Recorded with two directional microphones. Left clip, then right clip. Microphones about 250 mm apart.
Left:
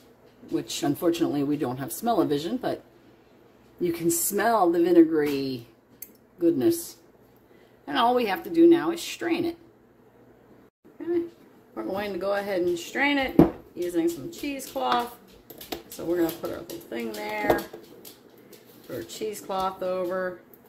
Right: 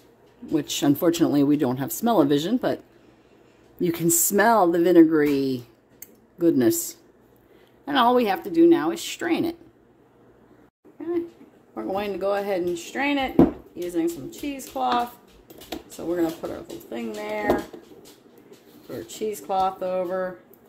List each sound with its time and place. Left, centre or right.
0.5 s speech: right
3.8 s speech: right
11.0 s a sound: centre
11.7 s speech: centre
16.0 s speech: centre
18.9 s speech: centre